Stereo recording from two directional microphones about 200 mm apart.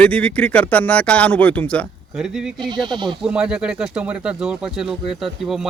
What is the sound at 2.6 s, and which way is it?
Speech, 20° right (ahead or behind).